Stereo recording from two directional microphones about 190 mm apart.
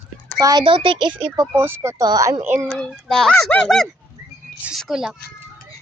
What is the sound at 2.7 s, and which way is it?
A child's voice, centre (ahead or behind).